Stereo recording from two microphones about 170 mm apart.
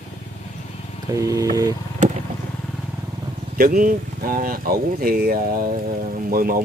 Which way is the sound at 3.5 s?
55° right (ahead or behind).